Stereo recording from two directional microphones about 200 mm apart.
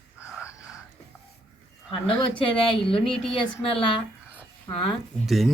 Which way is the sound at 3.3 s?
25° left (ahead or behind).